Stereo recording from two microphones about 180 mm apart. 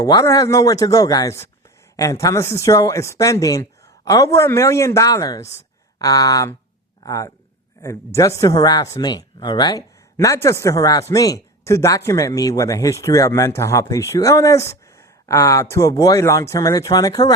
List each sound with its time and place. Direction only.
0.0 s speech: 20° left (ahead or behind)